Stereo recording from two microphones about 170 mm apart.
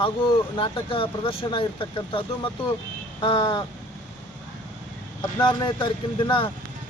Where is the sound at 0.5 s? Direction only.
30° left (ahead or behind).